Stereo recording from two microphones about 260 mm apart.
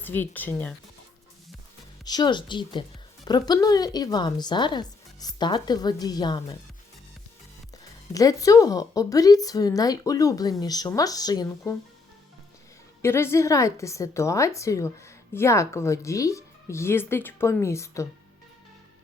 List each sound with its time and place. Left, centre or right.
0.0 s a woman's voice: centre
2.0 s a woman's voice: centre
8.1 s a woman's voice: centre
13.0 s a woman's voice: centre